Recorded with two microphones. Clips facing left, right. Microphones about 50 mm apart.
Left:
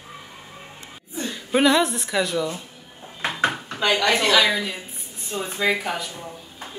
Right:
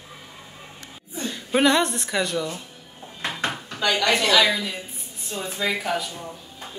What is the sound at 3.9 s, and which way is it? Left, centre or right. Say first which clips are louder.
Speech: left 1 dB; centre.